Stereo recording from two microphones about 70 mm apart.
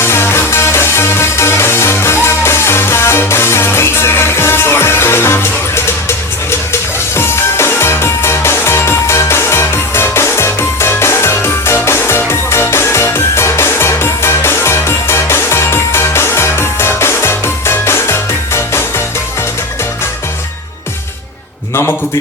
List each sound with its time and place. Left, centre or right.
0.0 s music: left